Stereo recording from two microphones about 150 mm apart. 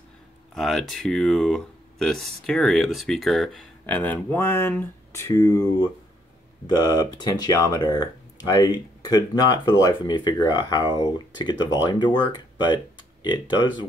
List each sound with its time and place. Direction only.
0.6 s speech: centre (ahead or behind); by 13.8 s 30° left (ahead or behind)